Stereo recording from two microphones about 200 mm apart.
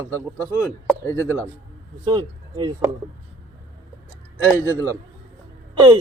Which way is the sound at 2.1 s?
20° right (ahead or behind).